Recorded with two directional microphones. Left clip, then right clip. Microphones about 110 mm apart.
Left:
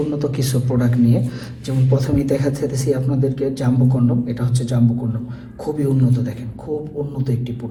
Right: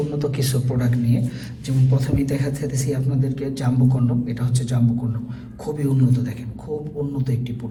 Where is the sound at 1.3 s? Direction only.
35° left (ahead or behind).